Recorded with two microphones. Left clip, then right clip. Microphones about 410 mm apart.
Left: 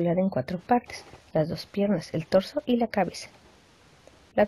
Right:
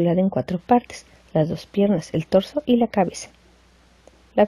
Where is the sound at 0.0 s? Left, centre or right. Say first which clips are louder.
Right 5 dB; left.